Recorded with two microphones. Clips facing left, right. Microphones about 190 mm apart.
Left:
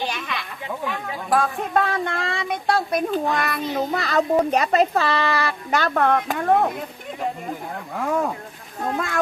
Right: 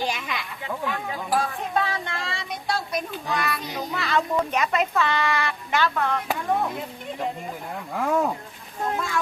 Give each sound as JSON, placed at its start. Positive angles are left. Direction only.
{"t": 0.7, "sound": "a sound", "side_deg": 5}
{"t": 1.4, "sound": "speech", "side_deg": 55}
{"t": 7.9, "sound": "speech", "side_deg": 0}
{"t": 9.0, "sound": "speech", "side_deg": 60}